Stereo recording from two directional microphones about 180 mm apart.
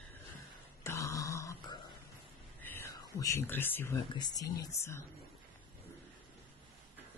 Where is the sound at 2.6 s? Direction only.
15° left (ahead or behind).